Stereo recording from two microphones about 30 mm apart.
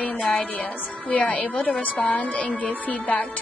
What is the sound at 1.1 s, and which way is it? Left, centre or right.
Music, left.